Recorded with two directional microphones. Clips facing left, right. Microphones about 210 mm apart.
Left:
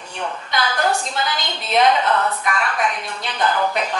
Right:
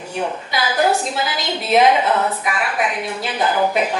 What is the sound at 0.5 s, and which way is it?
A woman's voice, 5° right (ahead or behind).